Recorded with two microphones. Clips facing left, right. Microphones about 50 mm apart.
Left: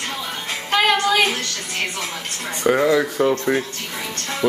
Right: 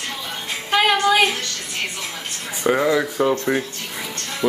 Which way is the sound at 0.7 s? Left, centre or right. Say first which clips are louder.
Right 1 dB; centre.